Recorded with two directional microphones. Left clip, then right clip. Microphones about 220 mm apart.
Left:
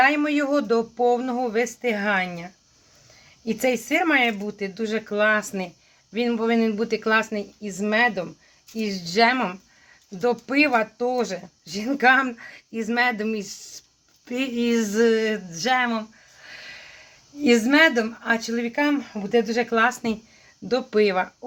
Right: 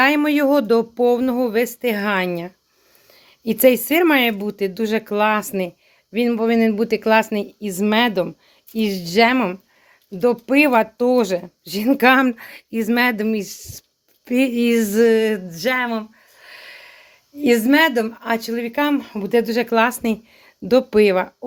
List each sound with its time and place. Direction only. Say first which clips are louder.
0.0 s speech: right 4 dB; 40° right (ahead or behind)